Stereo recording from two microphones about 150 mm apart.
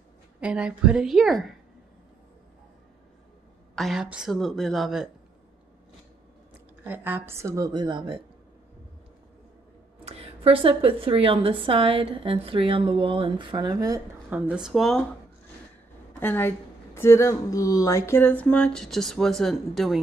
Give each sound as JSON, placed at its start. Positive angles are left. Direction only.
{"t": 0.4, "sound": "a woman's voice", "side_deg": -5}
{"t": 3.7, "sound": "a woman's voice", "side_deg": 0}
{"t": 6.8, "sound": "a woman's voice", "side_deg": -10}
{"t": 10.0, "sound": "a woman's voice", "side_deg": -40}
{"t": 14.3, "sound": "a woman's voice", "side_deg": -10}
{"t": 16.2, "sound": "speech", "side_deg": 15}